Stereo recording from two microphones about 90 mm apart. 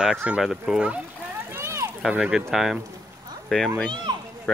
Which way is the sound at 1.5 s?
30° right (ahead or behind).